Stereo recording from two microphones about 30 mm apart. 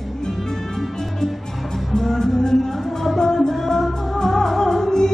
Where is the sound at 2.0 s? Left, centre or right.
Centre.